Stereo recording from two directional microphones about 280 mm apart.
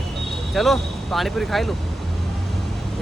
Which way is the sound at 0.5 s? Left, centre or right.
Centre.